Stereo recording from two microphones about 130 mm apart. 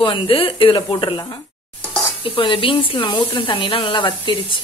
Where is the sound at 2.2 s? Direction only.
40° left (ahead or behind).